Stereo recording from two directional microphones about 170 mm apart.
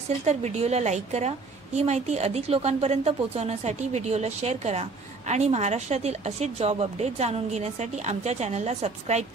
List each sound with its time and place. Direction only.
0.2 s a woman's voice: 40° right (ahead or behind)